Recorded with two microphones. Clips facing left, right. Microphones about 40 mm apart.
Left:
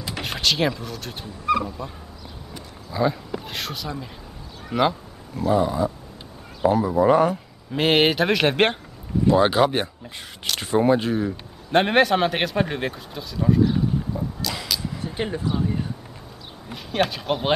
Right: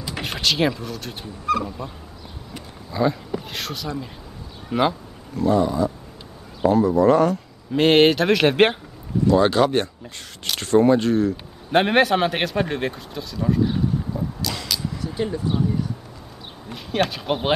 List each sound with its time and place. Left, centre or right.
0.1 s speech: centre
7.7 s speech: centre
9.3 s speech: centre
11.7 s speech: centre
13.7 s arrow: centre
15.1 s speech: left
16.6 s speech: centre